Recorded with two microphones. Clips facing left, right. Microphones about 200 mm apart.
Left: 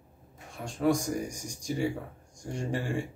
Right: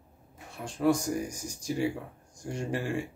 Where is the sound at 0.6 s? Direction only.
Centre (ahead or behind).